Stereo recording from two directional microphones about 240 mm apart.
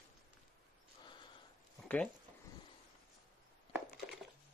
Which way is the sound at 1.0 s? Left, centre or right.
Centre.